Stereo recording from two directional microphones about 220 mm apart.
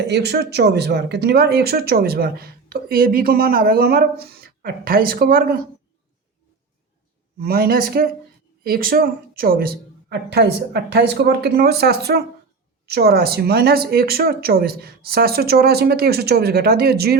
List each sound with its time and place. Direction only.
0.1 s speech: 50° right (ahead or behind)
7.3 s speech: 45° right (ahead or behind)